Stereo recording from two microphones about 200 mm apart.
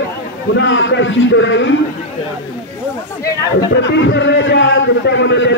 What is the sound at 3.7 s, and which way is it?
A man's voice, 60° left (ahead or behind).